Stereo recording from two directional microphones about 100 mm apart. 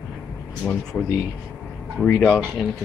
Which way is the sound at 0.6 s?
Centre (ahead or behind).